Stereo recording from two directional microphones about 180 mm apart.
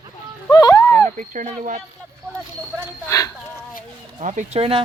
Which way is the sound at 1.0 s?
45° right (ahead or behind).